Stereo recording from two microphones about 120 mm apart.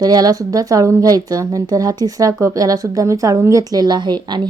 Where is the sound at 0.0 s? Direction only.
35° right (ahead or behind).